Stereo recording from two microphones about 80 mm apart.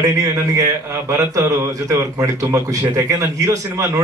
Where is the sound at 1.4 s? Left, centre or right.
Right.